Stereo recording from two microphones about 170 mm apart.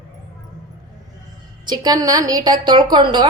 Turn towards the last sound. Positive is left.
turn(degrees=-25)  # may be behind; listen again after turning